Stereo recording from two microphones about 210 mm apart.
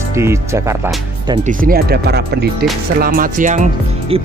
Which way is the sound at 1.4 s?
40° right (ahead or behind).